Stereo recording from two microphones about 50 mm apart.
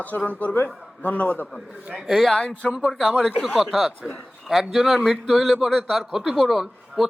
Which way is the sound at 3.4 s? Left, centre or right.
Centre.